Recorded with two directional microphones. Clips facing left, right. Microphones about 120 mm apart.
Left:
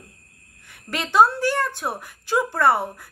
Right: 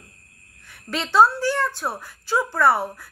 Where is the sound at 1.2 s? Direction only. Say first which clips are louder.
Even; 55° left (ahead or behind).